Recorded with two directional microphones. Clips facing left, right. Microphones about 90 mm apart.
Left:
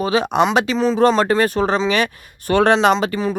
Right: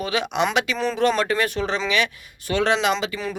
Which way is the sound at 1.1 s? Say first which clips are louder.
Left 6 dB; 35° left (ahead or behind).